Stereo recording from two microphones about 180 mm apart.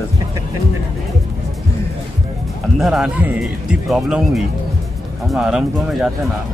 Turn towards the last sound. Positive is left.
turn(degrees=0)  # may be behind; listen again after turning